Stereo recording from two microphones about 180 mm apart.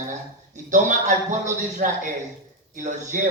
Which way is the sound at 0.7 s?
45° right (ahead or behind).